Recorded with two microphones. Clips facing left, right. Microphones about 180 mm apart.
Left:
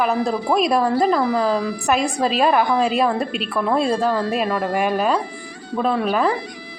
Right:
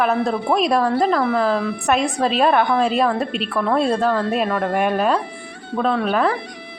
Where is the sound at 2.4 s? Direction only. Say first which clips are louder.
Right 1 dB; 10° left (ahead or behind).